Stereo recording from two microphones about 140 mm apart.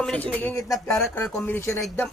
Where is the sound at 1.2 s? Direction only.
15° left (ahead or behind).